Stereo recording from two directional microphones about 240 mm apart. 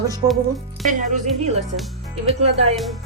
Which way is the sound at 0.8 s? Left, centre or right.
Right.